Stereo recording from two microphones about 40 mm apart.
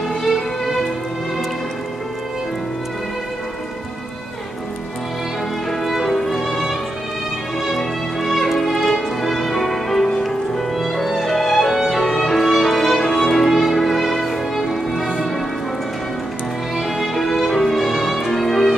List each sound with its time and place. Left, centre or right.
0.1 s music: centre
5.7 s music: centre
16.7 s music: centre